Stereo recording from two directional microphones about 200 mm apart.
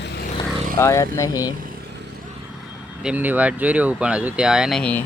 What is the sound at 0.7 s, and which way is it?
Speech, 15° left (ahead or behind).